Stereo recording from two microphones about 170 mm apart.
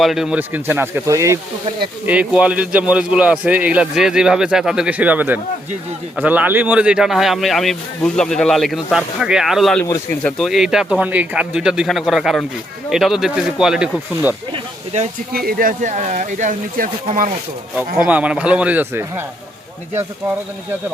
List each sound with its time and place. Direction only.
0.0 s a man's voice: centre (ahead or behind); by 1.4 s 20° right (ahead or behind)
2.0 s a man's voice: 5° right (ahead or behind)
15.3 s speech: 60° right (ahead or behind)
17.7 s a man's voice: 10° right (ahead or behind)